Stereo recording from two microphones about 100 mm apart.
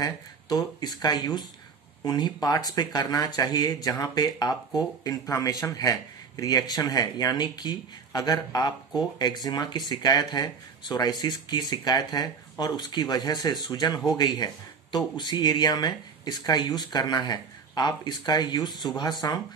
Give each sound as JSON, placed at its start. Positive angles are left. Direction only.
{"t": 0.0, "sound": "speech", "side_deg": 40}
{"t": 18.7, "sound": "speech", "side_deg": 0}
{"t": 19.2, "sound": "speech", "side_deg": 40}